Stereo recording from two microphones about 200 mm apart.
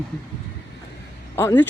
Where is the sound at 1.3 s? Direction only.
10° left (ahead or behind).